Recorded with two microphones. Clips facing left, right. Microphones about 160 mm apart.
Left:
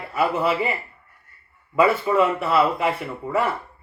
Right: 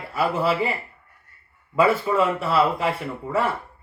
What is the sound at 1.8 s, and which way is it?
Speech, 35° right (ahead or behind).